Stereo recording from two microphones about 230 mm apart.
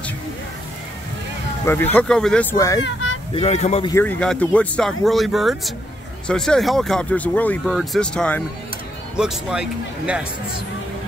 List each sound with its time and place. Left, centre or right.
1.7 s speech: centre
2.5 s a child's voice: centre
2.8 s a sound: left
3.3 s speech: left
3.9 s speech: centre